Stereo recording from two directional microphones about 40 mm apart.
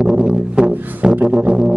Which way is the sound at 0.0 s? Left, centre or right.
Right.